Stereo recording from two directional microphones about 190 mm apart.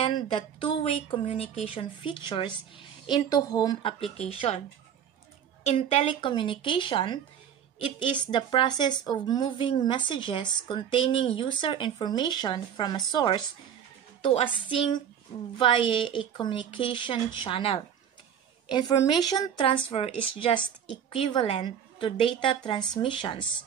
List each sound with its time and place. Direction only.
0.0 s speech: 25° left (ahead or behind)
5.6 s speech: 35° left (ahead or behind)